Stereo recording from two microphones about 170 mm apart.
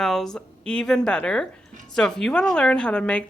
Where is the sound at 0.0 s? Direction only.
Centre (ahead or behind).